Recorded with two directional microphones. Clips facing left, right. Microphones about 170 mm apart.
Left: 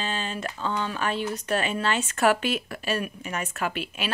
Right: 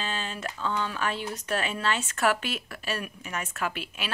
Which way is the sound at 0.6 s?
20° left (ahead or behind).